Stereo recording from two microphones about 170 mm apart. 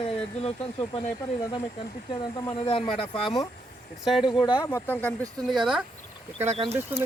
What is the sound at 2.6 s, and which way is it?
Speech, 30° left (ahead or behind).